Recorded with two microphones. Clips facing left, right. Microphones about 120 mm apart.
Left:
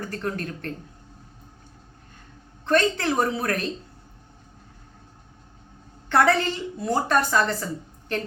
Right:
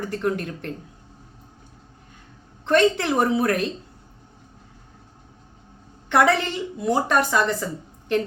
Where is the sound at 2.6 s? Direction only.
20° right (ahead or behind).